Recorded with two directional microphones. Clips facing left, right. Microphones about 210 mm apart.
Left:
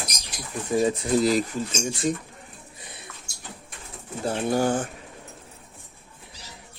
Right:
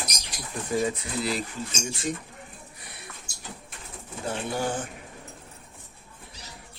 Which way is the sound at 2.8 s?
20° left (ahead or behind).